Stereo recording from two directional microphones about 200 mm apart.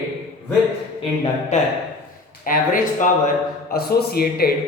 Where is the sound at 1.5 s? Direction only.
35° left (ahead or behind).